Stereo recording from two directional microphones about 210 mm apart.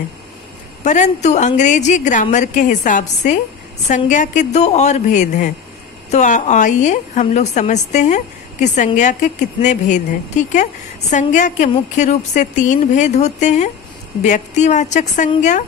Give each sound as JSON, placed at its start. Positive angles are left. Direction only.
{"t": 0.8, "sound": "a woman's voice", "side_deg": 35}